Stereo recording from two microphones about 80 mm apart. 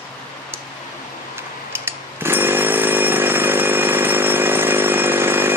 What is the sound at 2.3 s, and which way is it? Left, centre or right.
Chainsaw, right.